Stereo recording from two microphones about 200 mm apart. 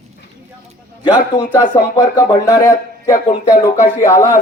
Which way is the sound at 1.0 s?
20° left (ahead or behind).